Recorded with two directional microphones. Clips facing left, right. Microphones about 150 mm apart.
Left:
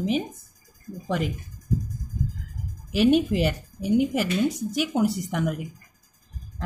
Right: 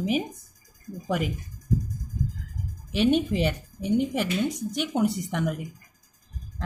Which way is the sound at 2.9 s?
5° left (ahead or behind).